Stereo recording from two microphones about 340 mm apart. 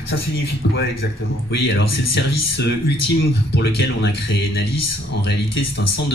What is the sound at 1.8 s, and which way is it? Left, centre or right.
Speech, left.